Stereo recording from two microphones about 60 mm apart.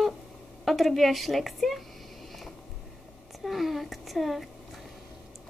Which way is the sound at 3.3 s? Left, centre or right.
Centre.